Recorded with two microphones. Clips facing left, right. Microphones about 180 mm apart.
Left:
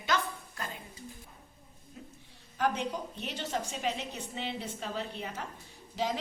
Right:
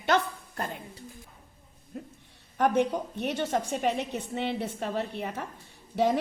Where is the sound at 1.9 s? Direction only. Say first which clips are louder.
Right 9 dB; 55° right (ahead or behind).